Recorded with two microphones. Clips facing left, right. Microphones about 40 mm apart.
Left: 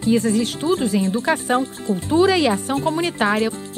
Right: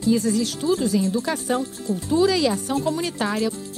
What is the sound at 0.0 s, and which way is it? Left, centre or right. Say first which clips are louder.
A woman's voice: left 2 dB; left.